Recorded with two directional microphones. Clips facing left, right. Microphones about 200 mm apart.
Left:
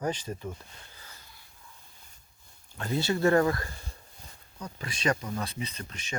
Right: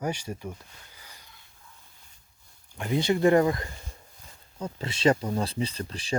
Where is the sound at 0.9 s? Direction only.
15° right (ahead or behind).